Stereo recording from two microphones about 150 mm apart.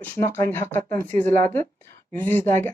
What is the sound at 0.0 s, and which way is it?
Speech, 10° left (ahead or behind).